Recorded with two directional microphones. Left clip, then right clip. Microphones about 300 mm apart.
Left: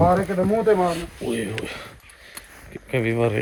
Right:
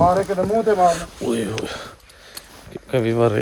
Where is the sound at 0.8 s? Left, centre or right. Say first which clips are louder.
Right 6 dB; centre.